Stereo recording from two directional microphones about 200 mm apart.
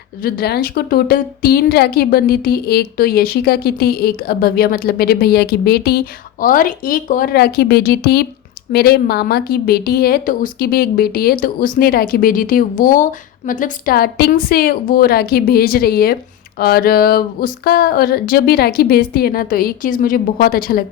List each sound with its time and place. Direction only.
0.2 s a woman's voice: 50° left (ahead or behind)